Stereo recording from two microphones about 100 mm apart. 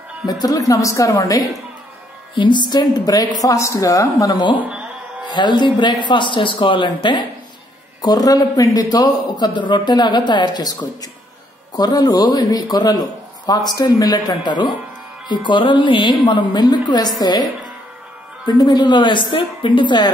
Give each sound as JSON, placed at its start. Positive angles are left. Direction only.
{"t": 0.3, "sound": "a man's voice", "side_deg": 40}
{"t": 2.3, "sound": "a man's voice", "side_deg": 50}
{"t": 8.0, "sound": "a man's voice", "side_deg": 40}
{"t": 18.5, "sound": "a woman's voice", "side_deg": 45}